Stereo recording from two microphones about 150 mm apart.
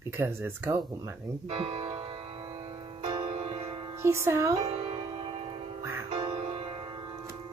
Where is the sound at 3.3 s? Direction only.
45° right (ahead or behind).